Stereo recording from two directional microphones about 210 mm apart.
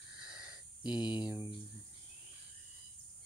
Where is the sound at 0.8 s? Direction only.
20° left (ahead or behind).